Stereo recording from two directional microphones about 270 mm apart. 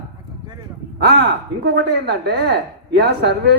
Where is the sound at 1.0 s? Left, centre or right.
Right.